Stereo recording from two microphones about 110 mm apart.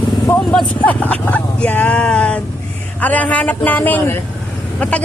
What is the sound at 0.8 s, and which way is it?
A man's voice, 15° left (ahead or behind).